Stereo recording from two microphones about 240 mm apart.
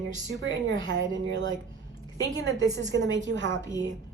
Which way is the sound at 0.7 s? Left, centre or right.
Right.